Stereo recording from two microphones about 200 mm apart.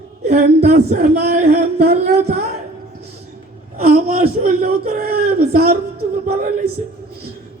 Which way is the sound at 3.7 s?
50° right (ahead or behind).